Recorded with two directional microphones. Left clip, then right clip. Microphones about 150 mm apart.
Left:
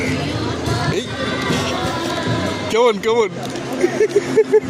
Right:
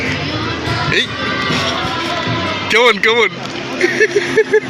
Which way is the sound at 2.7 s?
15° left (ahead or behind).